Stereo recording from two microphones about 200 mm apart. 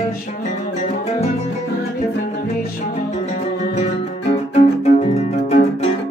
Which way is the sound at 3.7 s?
30° left (ahead or behind).